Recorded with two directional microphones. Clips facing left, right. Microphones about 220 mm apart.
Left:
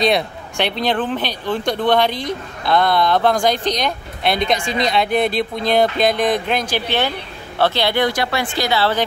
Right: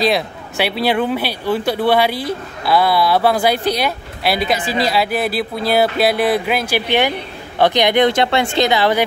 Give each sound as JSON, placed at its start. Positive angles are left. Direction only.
{"t": 0.0, "sound": "speech", "side_deg": -5}